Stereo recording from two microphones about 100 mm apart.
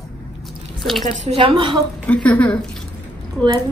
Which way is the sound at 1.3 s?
65° right (ahead or behind).